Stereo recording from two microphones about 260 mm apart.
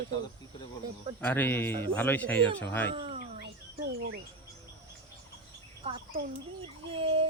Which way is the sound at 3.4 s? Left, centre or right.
Right.